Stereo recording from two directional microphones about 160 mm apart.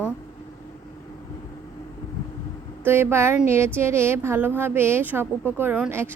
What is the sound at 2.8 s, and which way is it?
A woman's voice, 15° right (ahead or behind).